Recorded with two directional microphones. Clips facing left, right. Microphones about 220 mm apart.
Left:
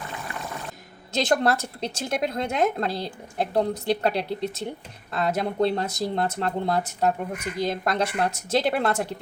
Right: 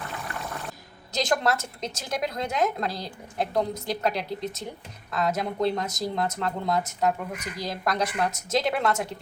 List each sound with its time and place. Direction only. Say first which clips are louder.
1.1 s speech: left 3 dB; 30° left (ahead or behind)